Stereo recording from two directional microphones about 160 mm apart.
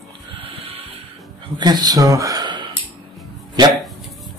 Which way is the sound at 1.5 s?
25° right (ahead or behind).